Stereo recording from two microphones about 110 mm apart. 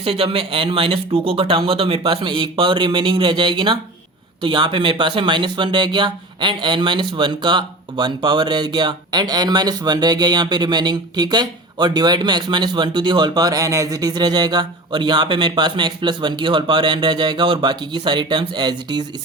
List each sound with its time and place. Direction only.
0.0 s speech: 55° right (ahead or behind)